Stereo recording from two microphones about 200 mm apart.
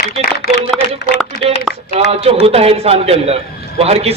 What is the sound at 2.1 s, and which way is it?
A man's voice, 30° right (ahead or behind).